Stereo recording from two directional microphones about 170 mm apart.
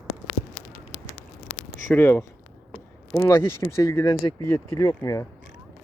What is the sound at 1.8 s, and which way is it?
Speech, 15° left (ahead or behind).